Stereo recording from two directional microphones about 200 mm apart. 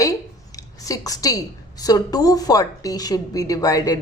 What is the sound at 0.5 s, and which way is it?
A woman's voice, 15° left (ahead or behind).